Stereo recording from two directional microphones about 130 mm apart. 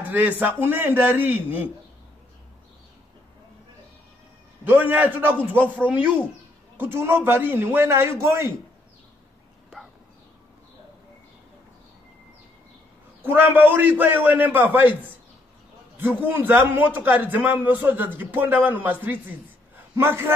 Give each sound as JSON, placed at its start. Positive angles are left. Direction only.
{"t": 0.4, "sound": "a man's voice", "side_deg": -15}
{"t": 4.6, "sound": "a man's voice", "side_deg": -15}
{"t": 13.2, "sound": "a man's voice", "side_deg": -15}
{"t": 16.0, "sound": "a man's voice", "side_deg": -15}